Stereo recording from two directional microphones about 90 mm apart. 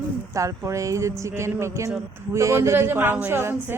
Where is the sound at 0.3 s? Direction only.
35° right (ahead or behind).